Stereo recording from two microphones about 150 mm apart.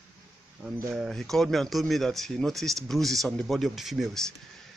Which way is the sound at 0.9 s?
Centre (ahead or behind).